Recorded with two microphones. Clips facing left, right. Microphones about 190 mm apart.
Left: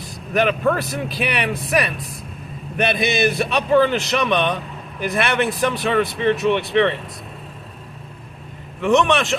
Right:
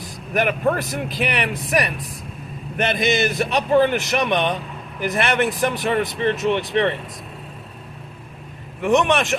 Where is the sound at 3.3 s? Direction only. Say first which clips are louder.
Left 1 dB; 15° right (ahead or behind).